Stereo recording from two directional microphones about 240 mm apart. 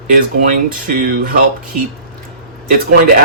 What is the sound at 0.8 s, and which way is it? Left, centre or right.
Speech, right.